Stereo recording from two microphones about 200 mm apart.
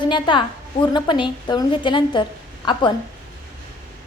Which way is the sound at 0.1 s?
25° left (ahead or behind).